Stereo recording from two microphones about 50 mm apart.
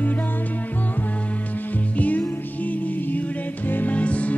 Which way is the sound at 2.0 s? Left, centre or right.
Left.